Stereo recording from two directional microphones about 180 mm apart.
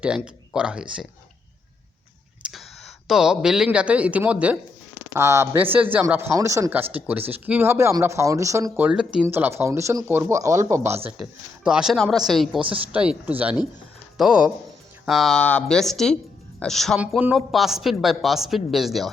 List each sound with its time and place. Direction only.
0.0 s speech: 5° right (ahead or behind)
2.4 s speech: centre (ahead or behind)
11.2 s speech: 5° right (ahead or behind)